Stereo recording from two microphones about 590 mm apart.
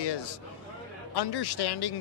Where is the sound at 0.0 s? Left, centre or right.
Left.